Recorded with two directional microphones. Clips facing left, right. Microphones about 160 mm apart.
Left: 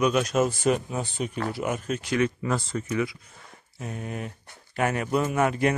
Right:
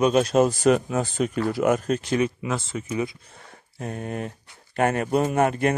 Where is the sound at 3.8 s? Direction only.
45° right (ahead or behind).